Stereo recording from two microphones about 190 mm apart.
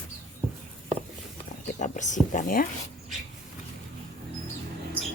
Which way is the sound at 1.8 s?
40° left (ahead or behind).